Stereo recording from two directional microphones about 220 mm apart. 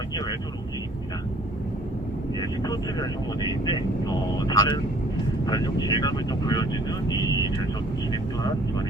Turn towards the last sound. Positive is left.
turn(degrees=15)  # may be behind; listen again after turning